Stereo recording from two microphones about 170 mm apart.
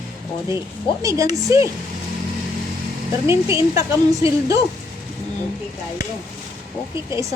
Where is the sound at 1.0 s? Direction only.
20° right (ahead or behind).